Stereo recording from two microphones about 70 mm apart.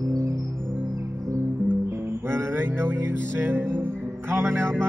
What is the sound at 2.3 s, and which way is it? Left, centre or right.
Music, right.